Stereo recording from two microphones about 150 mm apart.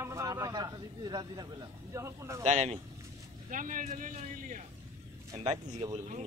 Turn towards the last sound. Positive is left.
turn(degrees=-50)  # may be behind; listen again after turning